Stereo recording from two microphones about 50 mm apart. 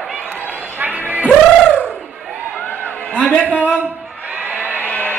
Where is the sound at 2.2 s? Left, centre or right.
Right.